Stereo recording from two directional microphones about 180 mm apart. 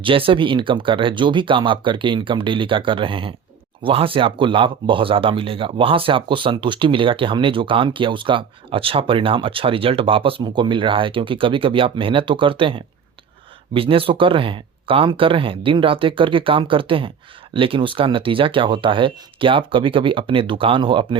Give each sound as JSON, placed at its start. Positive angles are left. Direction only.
{"t": 0.0, "sound": "speech", "side_deg": -30}